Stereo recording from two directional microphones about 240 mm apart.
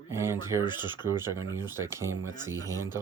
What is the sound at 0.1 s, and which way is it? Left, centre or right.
Speech, centre.